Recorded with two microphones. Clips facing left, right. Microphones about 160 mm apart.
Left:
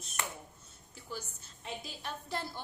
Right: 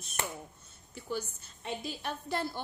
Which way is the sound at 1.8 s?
65° right (ahead or behind).